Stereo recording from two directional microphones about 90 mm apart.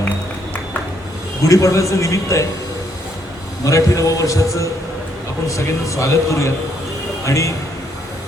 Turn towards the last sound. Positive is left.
turn(degrees=35)  # may be behind; listen again after turning